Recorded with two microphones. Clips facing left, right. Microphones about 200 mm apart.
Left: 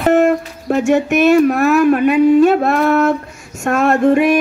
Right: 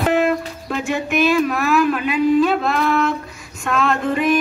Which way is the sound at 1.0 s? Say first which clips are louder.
Left 4 dB; 65° left (ahead or behind).